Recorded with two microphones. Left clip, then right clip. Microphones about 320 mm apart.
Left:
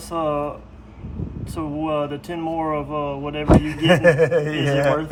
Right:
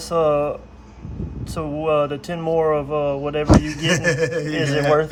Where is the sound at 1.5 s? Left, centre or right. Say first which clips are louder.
Right 4 dB; right.